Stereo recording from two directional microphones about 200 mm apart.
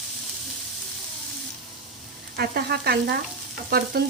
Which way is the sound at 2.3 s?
50° right (ahead or behind).